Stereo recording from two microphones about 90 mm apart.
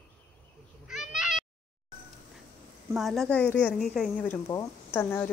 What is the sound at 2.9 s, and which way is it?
A woman's voice, centre (ahead or behind).